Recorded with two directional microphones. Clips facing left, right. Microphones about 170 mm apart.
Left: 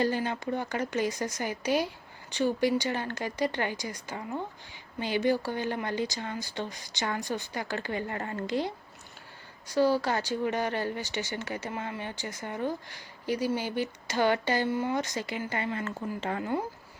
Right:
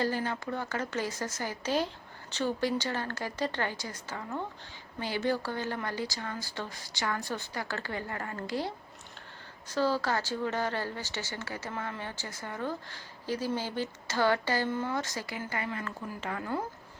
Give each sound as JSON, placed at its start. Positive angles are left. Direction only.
{"t": 0.0, "sound": "speech", "side_deg": 20}